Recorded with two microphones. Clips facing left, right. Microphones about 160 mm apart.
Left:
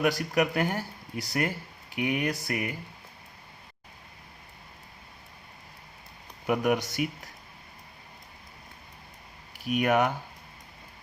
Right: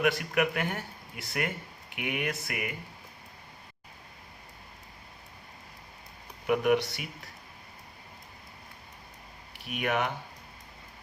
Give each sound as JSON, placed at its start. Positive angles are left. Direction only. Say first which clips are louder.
{"t": 0.0, "sound": "speech", "louder": "left 2 dB", "side_deg": 40}
{"t": 6.5, "sound": "speech", "louder": "right 1 dB", "side_deg": 45}
{"t": 9.6, "sound": "speech", "louder": "left 6 dB", "side_deg": 45}